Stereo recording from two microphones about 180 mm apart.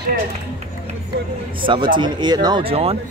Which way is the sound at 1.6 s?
25° right (ahead or behind).